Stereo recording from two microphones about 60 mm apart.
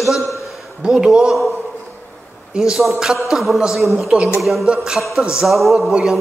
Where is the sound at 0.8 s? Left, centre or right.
Centre.